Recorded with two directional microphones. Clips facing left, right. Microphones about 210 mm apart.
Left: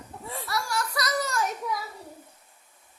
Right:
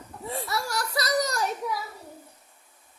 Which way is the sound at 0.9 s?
35° right (ahead or behind).